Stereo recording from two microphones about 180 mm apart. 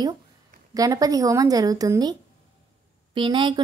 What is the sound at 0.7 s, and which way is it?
Speech, 20° right (ahead or behind).